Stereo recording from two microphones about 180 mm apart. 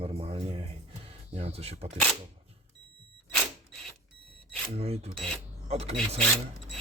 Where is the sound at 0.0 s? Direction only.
30° right (ahead or behind).